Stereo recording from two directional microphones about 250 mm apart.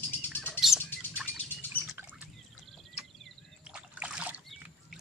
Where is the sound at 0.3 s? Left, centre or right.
Centre.